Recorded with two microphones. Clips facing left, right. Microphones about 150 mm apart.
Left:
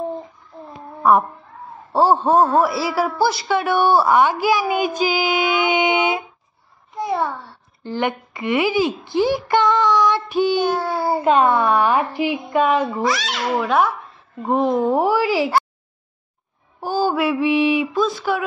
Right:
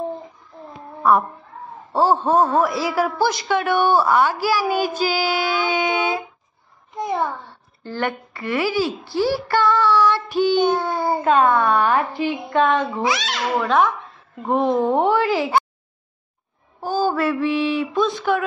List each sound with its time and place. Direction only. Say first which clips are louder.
1.9 s speech: left 2 dB; 10° left (ahead or behind)
7.0 s a child's voice: left 1 dB; centre (ahead or behind)
7.8 s speech: left 2 dB; 15° left (ahead or behind)
16.8 s mantra: left 1 dB; 10° left (ahead or behind)
17.9 s speech: even; centre (ahead or behind)